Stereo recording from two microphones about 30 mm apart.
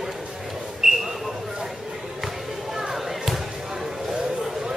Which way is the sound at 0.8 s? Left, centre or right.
Centre.